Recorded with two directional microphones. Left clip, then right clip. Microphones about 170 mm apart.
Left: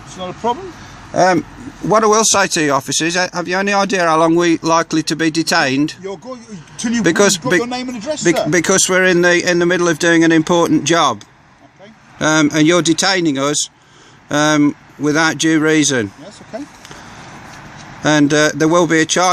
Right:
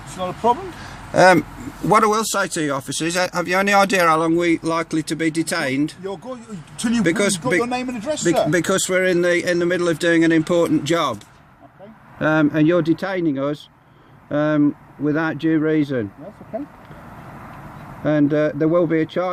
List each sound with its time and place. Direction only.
0.2 s speech: 15° left (ahead or behind)
1.1 s speech: centre (ahead or behind)
2.0 s speech: 30° left (ahead or behind); by 4.2 s 15° left (ahead or behind)
4.2 s speech: 40° left (ahead or behind)
7.0 s speech: 45° left (ahead or behind)
7.6 s speech: 20° left (ahead or behind)
8.4 s speech: 30° left (ahead or behind)
12.2 s speech: 25° left (ahead or behind); by 16.0 s 40° left (ahead or behind)
18.0 s speech: 40° left (ahead or behind)